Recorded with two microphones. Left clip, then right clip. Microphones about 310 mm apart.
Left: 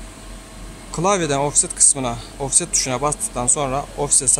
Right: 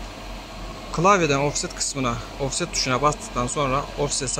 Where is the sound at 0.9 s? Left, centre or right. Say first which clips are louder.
Right 1 dB; centre.